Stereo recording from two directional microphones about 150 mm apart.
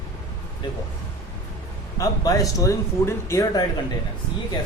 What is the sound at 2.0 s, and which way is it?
Speech, 25° left (ahead or behind).